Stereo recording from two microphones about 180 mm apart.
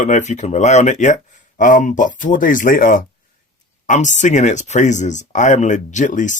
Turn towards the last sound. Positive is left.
turn(degrees=45)  # may be behind; listen again after turning